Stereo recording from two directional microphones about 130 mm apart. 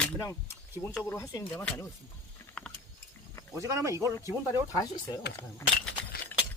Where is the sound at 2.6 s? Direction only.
5° left (ahead or behind).